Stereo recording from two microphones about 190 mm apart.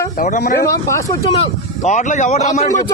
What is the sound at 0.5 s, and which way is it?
Speech, 15° left (ahead or behind).